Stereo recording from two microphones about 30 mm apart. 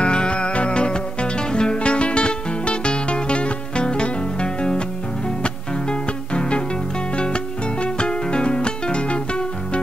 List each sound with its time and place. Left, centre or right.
0.0 s music: left
7.8 s music: left